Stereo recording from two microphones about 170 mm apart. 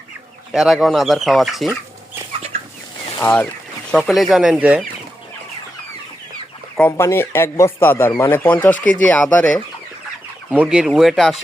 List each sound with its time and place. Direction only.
0.5 s speech: centre (ahead or behind)
2.5 s chicken: 40° right (ahead or behind)
3.2 s speech: 10° left (ahead or behind); by 4.8 s 5° right (ahead or behind)
6.7 s speech: 15° left (ahead or behind)
10.5 s speech: 5° right (ahead or behind)